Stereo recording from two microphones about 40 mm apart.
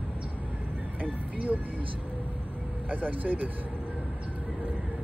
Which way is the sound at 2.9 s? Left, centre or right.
Right.